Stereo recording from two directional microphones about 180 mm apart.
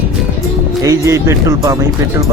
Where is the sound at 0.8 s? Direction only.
15° right (ahead or behind).